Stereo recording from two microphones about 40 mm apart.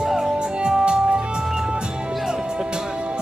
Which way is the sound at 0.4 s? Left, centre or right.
Right.